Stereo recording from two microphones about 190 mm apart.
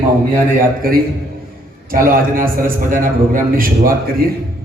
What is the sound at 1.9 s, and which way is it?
A man's voice, 50° right (ahead or behind).